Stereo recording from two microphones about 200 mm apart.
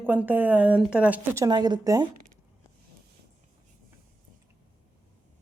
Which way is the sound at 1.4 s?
20° right (ahead or behind).